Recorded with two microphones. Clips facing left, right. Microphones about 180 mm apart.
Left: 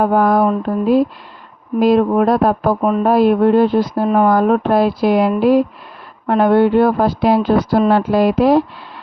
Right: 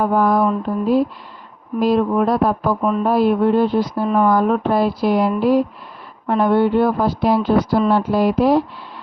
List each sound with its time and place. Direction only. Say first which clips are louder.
0.0 s speech: left 3 dB; 60° left (ahead or behind)
1.8 s speech: left 4 dB; 55° left (ahead or behind); by 5.6 s 85° left
6.2 s a woman's voice: left 3 dB; 70° left (ahead or behind); by 7.5 s 90° left
7.6 s speech: left 3 dB; 55° left (ahead or behind)
7.9 s speech: left 3 dB; 90° left